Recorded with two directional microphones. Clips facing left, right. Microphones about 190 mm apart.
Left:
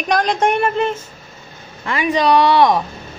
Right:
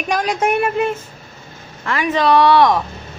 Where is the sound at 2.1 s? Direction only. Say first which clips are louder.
Right 1 dB; 15° left (ahead or behind).